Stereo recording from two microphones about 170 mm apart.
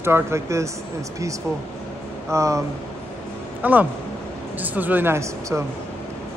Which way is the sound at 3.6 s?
10° right (ahead or behind).